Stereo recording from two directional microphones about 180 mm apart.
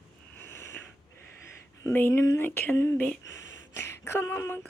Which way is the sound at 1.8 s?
10° left (ahead or behind).